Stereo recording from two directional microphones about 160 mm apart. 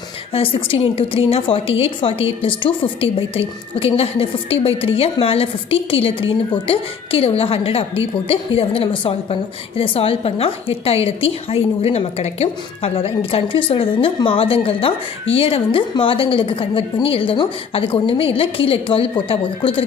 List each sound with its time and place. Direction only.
0.3 s a woman's voice: 35° left (ahead or behind)